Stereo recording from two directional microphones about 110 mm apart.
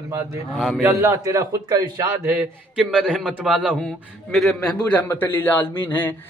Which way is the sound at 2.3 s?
10° right (ahead or behind).